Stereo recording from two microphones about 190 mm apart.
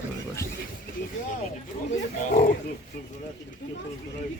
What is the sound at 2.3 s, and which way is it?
Speech, 45° left (ahead or behind).